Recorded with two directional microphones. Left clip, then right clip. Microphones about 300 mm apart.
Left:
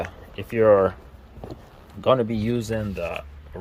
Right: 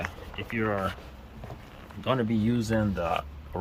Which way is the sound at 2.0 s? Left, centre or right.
Centre.